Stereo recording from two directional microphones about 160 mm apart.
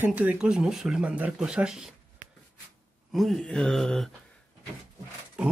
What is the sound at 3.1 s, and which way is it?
Speech, centre (ahead or behind).